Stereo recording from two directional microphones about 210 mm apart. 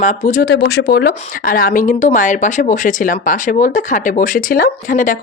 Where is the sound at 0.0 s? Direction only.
35° left (ahead or behind).